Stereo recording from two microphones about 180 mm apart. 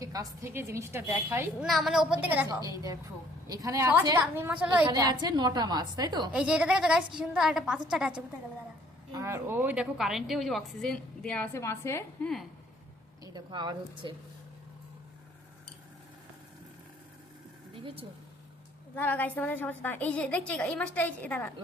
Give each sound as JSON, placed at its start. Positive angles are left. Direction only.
{"t": 0.0, "sound": "a woman's voice", "side_deg": -20}
{"t": 1.6, "sound": "a woman's voice", "side_deg": 0}
{"t": 3.4, "sound": "a woman's voice", "side_deg": -20}
{"t": 4.9, "sound": "a woman's voice", "side_deg": -20}
{"t": 6.3, "sound": "a woman's voice", "side_deg": -5}
{"t": 9.1, "sound": "a woman's voice", "side_deg": -15}
{"t": 13.2, "sound": "a woman's voice", "side_deg": -25}
{"t": 17.7, "sound": "speech", "side_deg": -30}
{"t": 18.9, "sound": "a woman's voice", "side_deg": 10}